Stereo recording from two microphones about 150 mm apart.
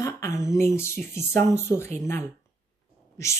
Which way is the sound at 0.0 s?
20° left (ahead or behind).